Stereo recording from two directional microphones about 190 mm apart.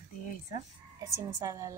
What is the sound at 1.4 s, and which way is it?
Speech, 15° right (ahead or behind).